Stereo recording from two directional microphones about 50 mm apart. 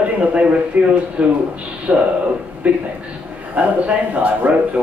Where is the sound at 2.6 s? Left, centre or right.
Right.